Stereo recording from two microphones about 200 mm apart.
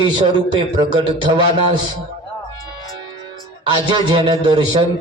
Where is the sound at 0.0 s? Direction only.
20° right (ahead or behind).